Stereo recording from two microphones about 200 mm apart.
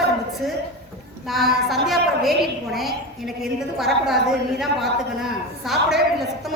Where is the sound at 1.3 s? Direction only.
Centre (ahead or behind).